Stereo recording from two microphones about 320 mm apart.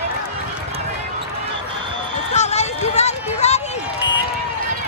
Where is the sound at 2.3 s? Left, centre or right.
Left.